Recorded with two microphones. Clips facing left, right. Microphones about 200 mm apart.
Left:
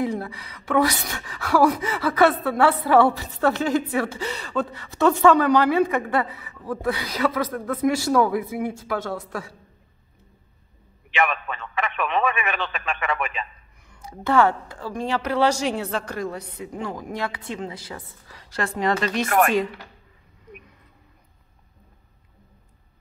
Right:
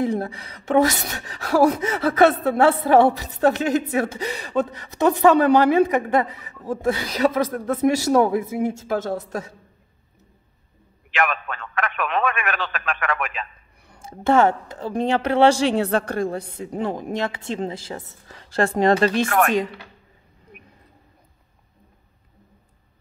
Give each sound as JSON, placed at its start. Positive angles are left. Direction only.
{"t": 0.8, "sound": "speech", "side_deg": -40}
{"t": 1.8, "sound": "a woman's voice", "side_deg": -25}
{"t": 9.0, "sound": "a woman's voice", "side_deg": -45}
{"t": 11.1, "sound": "a man's voice", "side_deg": 0}
{"t": 14.0, "sound": "a woman's voice", "side_deg": -25}
{"t": 15.8, "sound": "a woman's voice", "side_deg": -60}
{"t": 16.2, "sound": "a woman's voice", "side_deg": -30}
{"t": 19.2, "sound": "speech", "side_deg": 5}